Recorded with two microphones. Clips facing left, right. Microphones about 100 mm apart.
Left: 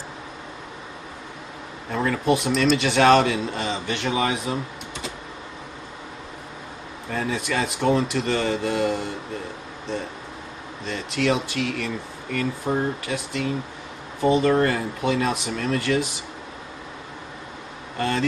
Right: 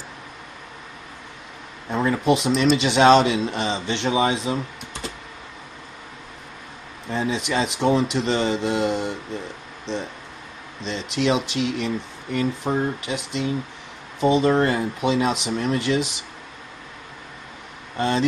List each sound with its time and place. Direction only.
1.9 s speech: 20° right (ahead or behind)
7.1 s speech: 20° right (ahead or behind)
10.8 s speech: 20° right (ahead or behind)
17.9 s speech: 20° right (ahead or behind)